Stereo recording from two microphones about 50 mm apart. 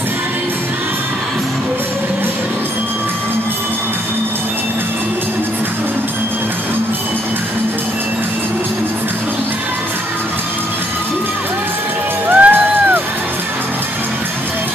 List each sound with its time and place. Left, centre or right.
12.3 s music: right